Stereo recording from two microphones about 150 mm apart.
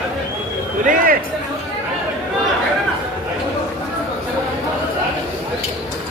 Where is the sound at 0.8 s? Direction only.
65° right (ahead or behind).